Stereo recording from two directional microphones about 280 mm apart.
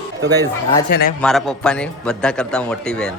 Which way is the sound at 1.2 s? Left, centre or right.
Centre.